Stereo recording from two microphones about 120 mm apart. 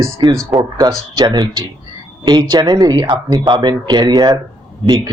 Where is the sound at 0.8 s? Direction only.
35° right (ahead or behind).